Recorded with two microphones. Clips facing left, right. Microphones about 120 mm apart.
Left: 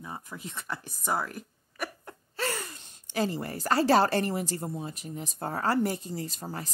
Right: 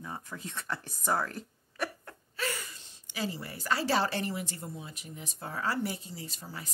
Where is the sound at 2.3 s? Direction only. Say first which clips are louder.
Left 3 dB; 40° left (ahead or behind).